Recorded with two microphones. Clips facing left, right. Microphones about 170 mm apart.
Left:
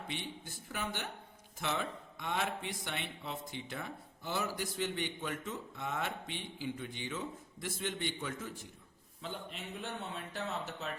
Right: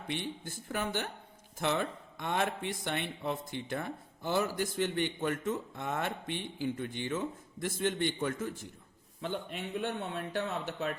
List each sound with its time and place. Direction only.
0.1 s speech: 50° right (ahead or behind)